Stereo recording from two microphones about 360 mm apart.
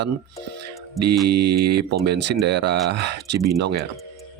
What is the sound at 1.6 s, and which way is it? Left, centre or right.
Speech, right.